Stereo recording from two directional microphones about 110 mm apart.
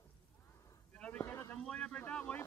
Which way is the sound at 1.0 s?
15° left (ahead or behind).